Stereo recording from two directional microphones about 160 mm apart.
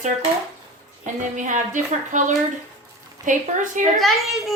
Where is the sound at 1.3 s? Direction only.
50° right (ahead or behind).